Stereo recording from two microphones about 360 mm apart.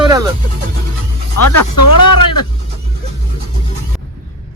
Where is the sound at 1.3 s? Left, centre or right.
Left.